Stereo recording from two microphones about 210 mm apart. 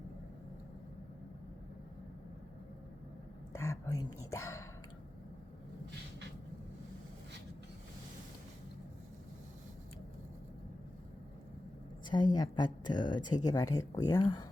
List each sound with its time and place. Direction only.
3.5 s speech: 15° left (ahead or behind)
12.0 s speech: 20° left (ahead or behind)